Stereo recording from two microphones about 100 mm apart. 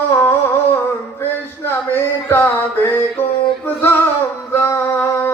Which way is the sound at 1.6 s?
25° left (ahead or behind).